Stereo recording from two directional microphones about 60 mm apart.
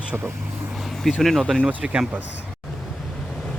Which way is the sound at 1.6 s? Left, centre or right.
Centre.